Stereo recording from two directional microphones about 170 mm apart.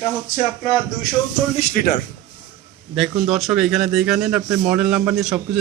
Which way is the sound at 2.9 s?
Centre (ahead or behind).